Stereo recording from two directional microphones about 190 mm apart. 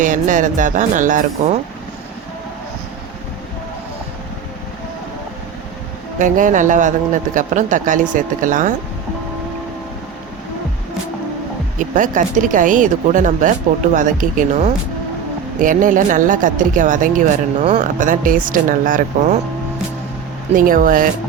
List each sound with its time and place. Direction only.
0.0 s speech: 45° right (ahead or behind)
6.1 s speech: 45° right (ahead or behind)
11.8 s speech: 45° right (ahead or behind)
20.5 s speech: 45° right (ahead or behind)